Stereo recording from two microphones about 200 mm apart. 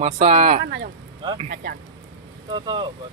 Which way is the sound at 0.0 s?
30° right (ahead or behind).